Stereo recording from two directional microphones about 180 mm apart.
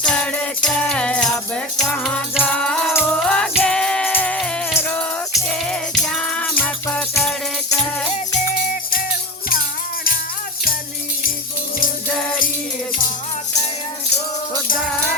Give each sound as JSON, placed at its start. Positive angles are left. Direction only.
{"t": 0.0, "sound": "music", "side_deg": 5}
{"t": 8.4, "sound": "music", "side_deg": 55}